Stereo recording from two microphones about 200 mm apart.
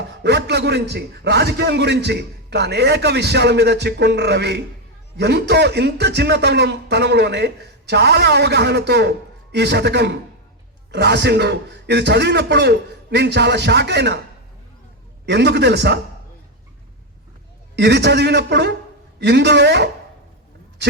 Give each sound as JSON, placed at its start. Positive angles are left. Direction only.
{"t": 0.1, "sound": "speech", "side_deg": -60}
{"t": 15.3, "sound": "speech", "side_deg": -55}
{"t": 17.7, "sound": "speech", "side_deg": -55}